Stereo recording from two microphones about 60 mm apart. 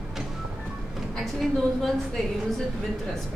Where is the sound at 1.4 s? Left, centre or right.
Centre.